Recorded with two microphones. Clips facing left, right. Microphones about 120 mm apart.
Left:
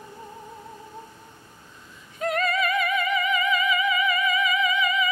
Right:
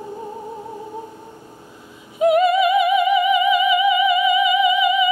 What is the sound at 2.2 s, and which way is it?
Opera, 10° right (ahead or behind).